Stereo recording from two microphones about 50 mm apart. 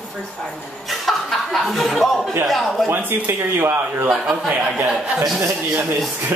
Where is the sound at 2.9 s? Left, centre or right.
Right.